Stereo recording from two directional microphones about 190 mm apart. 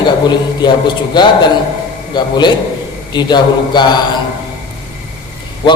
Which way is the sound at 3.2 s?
20° left (ahead or behind).